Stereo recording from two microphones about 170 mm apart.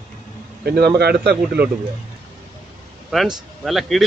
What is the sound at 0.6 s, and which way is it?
Speech, 70° right (ahead or behind).